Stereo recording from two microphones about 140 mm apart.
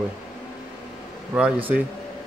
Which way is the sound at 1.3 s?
10° right (ahead or behind).